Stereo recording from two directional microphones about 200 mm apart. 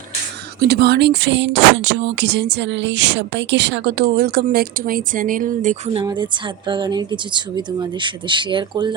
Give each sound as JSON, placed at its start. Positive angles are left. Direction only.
{"t": 0.7, "sound": "speech", "side_deg": -55}
{"t": 5.9, "sound": "speech", "side_deg": -25}